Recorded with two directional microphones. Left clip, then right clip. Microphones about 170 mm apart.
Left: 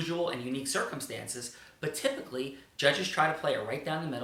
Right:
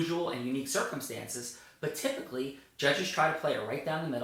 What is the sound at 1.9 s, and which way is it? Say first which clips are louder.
Speech: left 3 dB; 15° left (ahead or behind).